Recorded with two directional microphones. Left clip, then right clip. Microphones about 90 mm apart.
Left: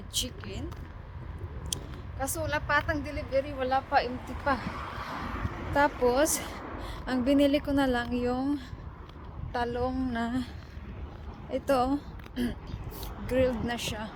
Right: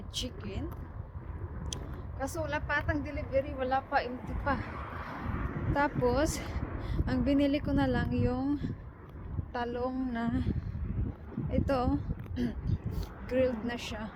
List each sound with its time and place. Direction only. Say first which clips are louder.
0.1 s speech: left 4 dB; 45° left (ahead or behind)
1.7 s speech: left 6 dB; 35° left (ahead or behind)
4.1 s a woman's voice: left 3 dB; 5° left (ahead or behind)
4.4 s speech: left 4 dB; 35° left (ahead or behind)
4.7 s a sound: left 4 dB; 5° right (ahead or behind)
6.0 s speech: left 4 dB; 45° left (ahead or behind)
6.8 s a sound: left 2 dB; 45° left (ahead or behind)
7.3 s a woman's voice: left 5 dB; 50° left (ahead or behind)
11.5 s speech: left 4 dB; 50° left (ahead or behind)